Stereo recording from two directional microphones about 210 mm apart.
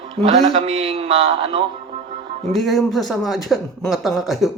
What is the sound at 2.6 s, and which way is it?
Speech, centre (ahead or behind).